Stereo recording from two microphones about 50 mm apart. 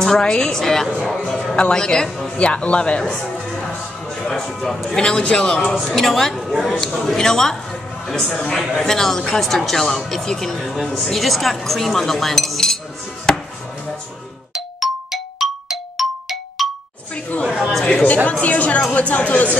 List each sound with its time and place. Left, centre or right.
0.0 s speech: centre
2.3 s speech: left
5.8 s speech: centre
6.5 s speech: centre
6.8 s speech: centre
13.3 s chopping: centre
14.8 s clang: centre
17.1 s chatter: left
17.5 s a sound: centre
18.0 s speech: left